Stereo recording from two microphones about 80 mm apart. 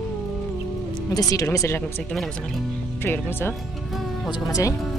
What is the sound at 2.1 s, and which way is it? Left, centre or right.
Speech, centre.